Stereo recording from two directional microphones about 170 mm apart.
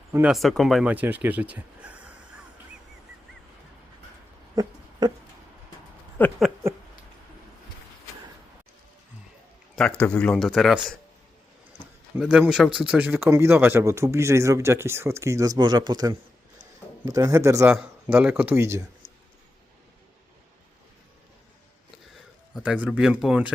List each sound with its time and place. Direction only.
0.1 s speech: 5° right (ahead or behind)
4.5 s a sound: 25° right (ahead or behind)
6.2 s a sound: 10° left (ahead or behind)
10.0 s speech: 5° left (ahead or behind)
12.2 s a man's voice: 5° right (ahead or behind)
22.5 s speech: 5° right (ahead or behind)